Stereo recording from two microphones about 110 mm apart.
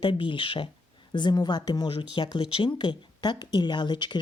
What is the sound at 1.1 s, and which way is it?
Speech, 40° left (ahead or behind).